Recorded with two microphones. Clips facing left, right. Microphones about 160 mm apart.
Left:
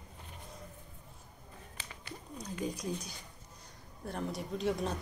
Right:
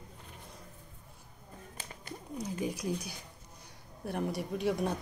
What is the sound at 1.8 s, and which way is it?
Bird, 45° right (ahead or behind).